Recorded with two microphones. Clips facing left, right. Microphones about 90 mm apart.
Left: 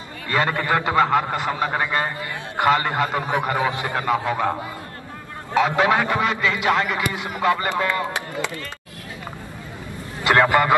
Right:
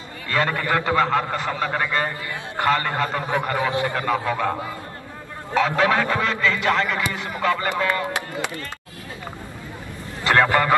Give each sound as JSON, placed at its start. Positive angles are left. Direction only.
{"t": 0.3, "sound": "a man's voice", "side_deg": 20}
{"t": 5.5, "sound": "a man's voice", "side_deg": 15}
{"t": 10.2, "sound": "a man's voice", "side_deg": 15}